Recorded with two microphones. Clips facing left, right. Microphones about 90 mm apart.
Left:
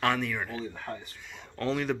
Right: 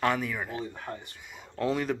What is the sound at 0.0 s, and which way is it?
Speech, 5° right (ahead or behind).